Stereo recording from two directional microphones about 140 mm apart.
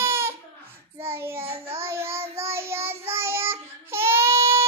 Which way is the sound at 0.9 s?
15° right (ahead or behind).